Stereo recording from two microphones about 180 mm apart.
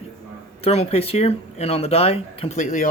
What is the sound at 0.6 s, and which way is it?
Speech, 35° left (ahead or behind).